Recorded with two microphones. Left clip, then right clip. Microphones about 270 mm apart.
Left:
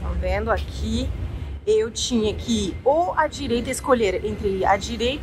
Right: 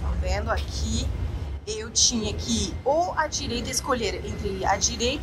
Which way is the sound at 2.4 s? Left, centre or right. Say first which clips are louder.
Left 4 dB; right.